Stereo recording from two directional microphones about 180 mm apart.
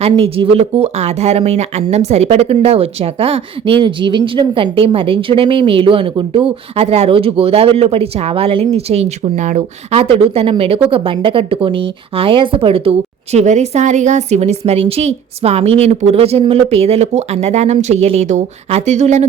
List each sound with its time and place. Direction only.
0.0 s speech: 30° right (ahead or behind)